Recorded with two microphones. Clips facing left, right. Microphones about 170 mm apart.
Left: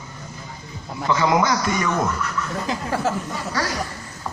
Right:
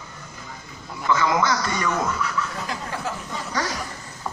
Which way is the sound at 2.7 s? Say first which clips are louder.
Left 5 dB; 20° left (ahead or behind).